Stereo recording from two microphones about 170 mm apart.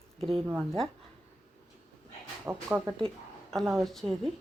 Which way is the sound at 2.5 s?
15° right (ahead or behind).